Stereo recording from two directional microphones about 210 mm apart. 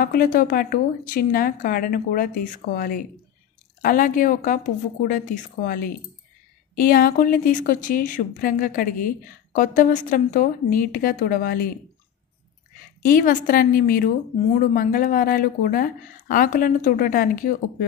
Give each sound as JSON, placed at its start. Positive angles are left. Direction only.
{"t": 0.0, "sound": "a woman's voice", "side_deg": 45}
{"t": 13.0, "sound": "speech", "side_deg": 40}